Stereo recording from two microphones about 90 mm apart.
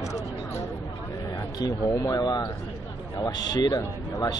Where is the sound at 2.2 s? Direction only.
50° left (ahead or behind).